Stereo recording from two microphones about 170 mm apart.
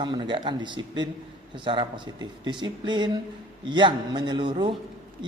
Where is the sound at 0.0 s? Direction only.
30° right (ahead or behind).